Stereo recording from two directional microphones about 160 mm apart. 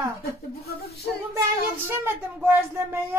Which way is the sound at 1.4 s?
15° right (ahead or behind).